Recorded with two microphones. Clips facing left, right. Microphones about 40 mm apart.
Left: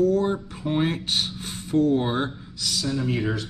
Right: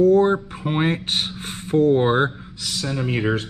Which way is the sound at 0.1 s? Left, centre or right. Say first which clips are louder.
Right 7 dB; right.